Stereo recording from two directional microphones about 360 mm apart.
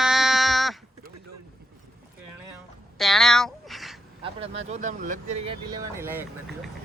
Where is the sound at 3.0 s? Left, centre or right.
Centre.